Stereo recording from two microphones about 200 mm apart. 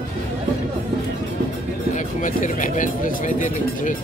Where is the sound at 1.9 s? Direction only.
40° left (ahead or behind).